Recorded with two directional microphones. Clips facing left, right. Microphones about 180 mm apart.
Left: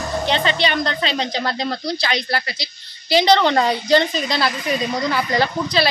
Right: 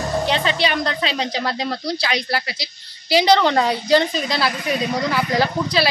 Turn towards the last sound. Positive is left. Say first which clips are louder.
# even
turn(degrees=-5)  # may be behind; listen again after turning